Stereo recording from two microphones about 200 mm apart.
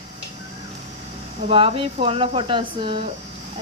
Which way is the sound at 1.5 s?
25° right (ahead or behind).